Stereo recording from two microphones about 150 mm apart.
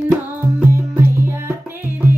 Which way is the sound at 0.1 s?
15° right (ahead or behind).